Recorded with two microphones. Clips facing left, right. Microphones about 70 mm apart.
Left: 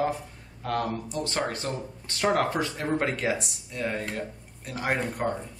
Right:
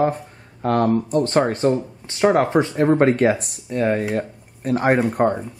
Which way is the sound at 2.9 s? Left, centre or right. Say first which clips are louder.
Right 10 dB; right.